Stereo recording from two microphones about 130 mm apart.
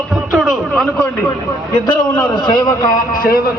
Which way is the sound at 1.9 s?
35° left (ahead or behind).